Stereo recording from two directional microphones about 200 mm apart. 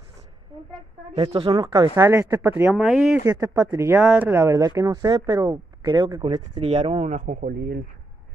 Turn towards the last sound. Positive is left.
turn(degrees=-50)  # may be behind; listen again after turning